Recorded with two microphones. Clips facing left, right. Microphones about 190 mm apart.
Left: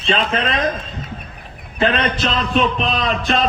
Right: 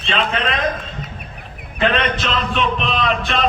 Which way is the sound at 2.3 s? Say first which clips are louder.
Left 2 dB; 35° left (ahead or behind).